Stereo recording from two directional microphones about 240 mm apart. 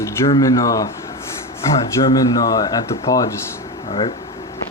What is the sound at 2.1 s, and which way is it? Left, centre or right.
Speech, centre.